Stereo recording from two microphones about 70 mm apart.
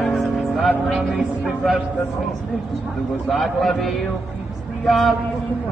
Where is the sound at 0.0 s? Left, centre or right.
Centre.